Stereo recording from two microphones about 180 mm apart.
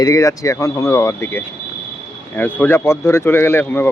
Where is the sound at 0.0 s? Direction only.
20° left (ahead or behind).